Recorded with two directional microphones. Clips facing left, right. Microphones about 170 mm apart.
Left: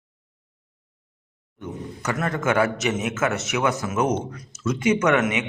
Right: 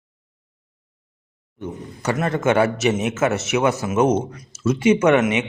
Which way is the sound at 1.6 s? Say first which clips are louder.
Right 2 dB; 25° right (ahead or behind).